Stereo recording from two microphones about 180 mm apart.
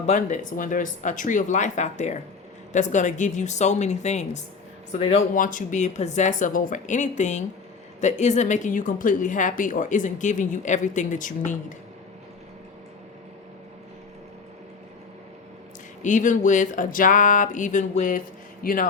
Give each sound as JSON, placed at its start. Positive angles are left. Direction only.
{"t": 0.0, "sound": "a woman's voice", "side_deg": 40}
{"t": 5.3, "sound": "a woman's voice", "side_deg": 45}
{"t": 16.0, "sound": "a woman's voice", "side_deg": 45}